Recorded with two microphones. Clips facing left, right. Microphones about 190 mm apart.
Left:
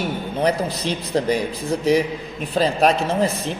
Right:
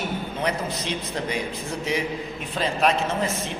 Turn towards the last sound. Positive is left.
turn(degrees=35)  # may be behind; listen again after turning